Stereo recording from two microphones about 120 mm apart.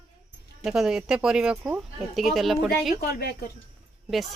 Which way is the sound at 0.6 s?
5° right (ahead or behind).